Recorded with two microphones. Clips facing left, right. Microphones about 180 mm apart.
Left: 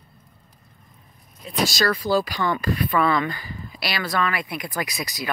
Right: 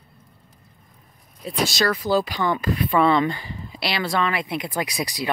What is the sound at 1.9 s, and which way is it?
Speech, 20° right (ahead or behind).